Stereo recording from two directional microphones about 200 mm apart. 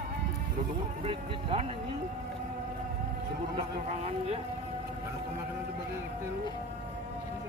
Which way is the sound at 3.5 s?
30° right (ahead or behind).